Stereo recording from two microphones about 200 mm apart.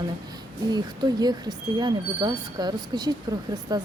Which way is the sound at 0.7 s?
20° right (ahead or behind).